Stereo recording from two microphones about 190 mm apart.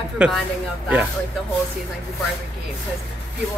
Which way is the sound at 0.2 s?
5° right (ahead or behind).